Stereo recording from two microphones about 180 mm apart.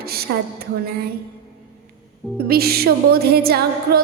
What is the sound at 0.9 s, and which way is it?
Music, 60° right (ahead or behind).